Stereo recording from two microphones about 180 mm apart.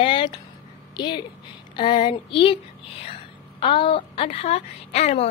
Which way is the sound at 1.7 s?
25° left (ahead or behind).